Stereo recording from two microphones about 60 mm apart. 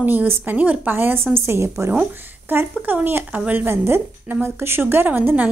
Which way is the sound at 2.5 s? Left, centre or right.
Right.